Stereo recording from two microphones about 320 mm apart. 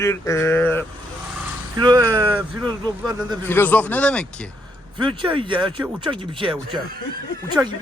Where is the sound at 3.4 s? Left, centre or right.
Centre.